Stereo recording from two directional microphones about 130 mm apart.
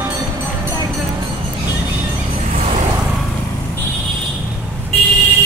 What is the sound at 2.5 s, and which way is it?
Vehicle, 65° right (ahead or behind).